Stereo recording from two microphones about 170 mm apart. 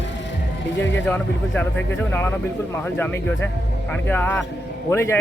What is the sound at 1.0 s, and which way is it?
Speech, 10° left (ahead or behind).